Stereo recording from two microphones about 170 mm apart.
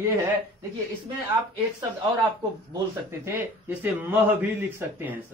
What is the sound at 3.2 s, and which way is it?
Speech, 15° right (ahead or behind).